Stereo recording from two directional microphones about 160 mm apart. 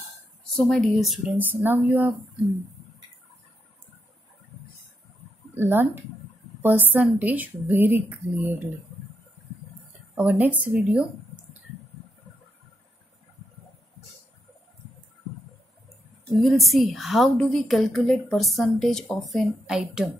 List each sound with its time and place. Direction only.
0.6 s a woman's voice: 5° left (ahead or behind)
1.4 s speech: 10° right (ahead or behind)
5.6 s speech: 15° right (ahead or behind)
10.1 s speech: 10° right (ahead or behind)
16.3 s a woman's voice: centre (ahead or behind)